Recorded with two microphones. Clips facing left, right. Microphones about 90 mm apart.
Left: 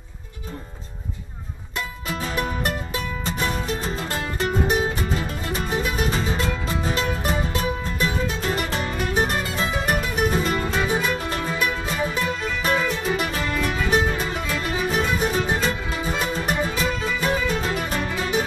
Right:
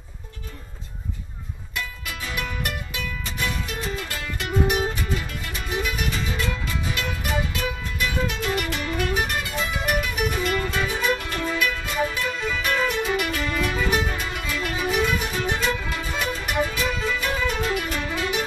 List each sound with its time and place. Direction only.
2.0 s music: 35° left (ahead or behind)
16.8 s music: centre (ahead or behind)
17.2 s music: 35° left (ahead or behind)